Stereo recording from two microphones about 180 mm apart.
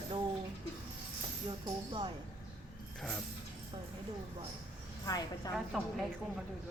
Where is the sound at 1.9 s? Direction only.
25° right (ahead or behind).